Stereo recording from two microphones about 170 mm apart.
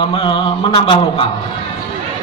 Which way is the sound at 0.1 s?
25° left (ahead or behind).